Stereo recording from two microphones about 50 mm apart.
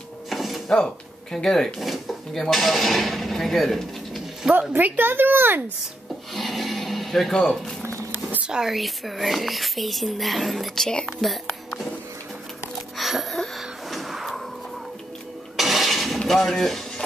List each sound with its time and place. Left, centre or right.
0.3 s drawer open or close: centre
0.7 s speech: centre
4.6 s speech: right
6.3 s a sound: centre
7.3 s speech: centre
8.6 s speech: centre
11.1 s music: centre
12.9 s music: centre
13.6 s a sound: centre
15.5 s a sound: centre
16.3 s speech: centre